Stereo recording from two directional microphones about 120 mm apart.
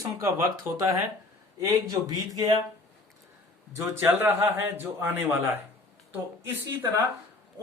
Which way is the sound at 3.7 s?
25° right (ahead or behind).